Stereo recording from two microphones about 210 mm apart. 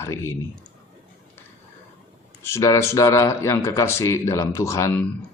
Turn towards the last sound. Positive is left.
turn(degrees=10)  # may be behind; listen again after turning